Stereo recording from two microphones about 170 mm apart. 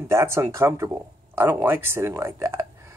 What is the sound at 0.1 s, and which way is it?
Speech, 15° right (ahead or behind).